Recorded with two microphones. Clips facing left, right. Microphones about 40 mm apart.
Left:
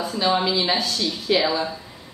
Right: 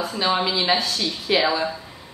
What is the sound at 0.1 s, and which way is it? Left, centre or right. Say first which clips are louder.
A woman's voice: left 2 dB; centre.